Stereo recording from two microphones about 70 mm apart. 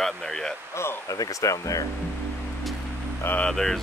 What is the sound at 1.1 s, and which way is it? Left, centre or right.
Speech, left.